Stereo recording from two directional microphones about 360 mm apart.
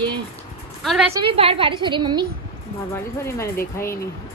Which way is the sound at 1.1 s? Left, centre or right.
Centre.